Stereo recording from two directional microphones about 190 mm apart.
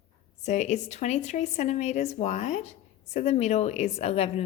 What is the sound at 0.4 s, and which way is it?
A woman's voice, 40° left (ahead or behind).